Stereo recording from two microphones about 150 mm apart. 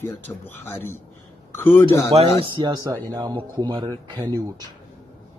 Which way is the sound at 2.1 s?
35° right (ahead or behind).